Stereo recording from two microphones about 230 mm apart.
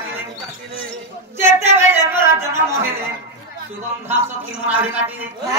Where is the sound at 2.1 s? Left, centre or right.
Centre.